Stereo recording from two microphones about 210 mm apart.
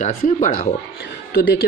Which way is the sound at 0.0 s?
35° left (ahead or behind).